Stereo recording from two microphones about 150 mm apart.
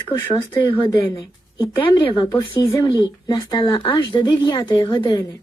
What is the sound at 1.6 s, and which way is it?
A woman's voice, 35° left (ahead or behind).